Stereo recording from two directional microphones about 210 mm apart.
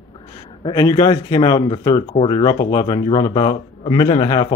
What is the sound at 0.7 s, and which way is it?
Speech, 20° left (ahead or behind).